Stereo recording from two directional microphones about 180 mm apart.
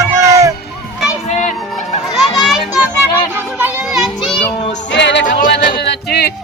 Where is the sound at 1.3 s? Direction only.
40° left (ahead or behind).